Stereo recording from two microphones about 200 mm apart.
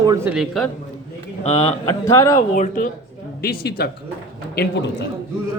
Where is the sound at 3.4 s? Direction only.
50° left (ahead or behind).